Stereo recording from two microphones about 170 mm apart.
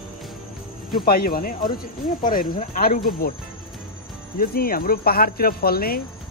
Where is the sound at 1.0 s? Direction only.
60° left (ahead or behind).